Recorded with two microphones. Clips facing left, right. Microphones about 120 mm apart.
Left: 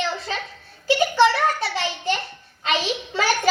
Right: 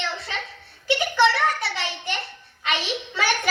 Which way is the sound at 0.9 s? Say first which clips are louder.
Left 3 dB; 25° left (ahead or behind).